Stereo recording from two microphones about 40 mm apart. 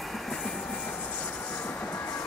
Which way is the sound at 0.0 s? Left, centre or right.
Centre.